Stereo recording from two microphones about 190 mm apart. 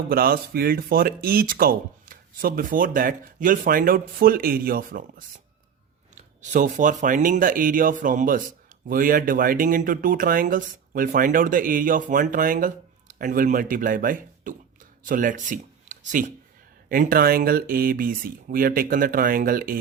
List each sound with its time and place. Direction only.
0.1 s speech: 50° right (ahead or behind)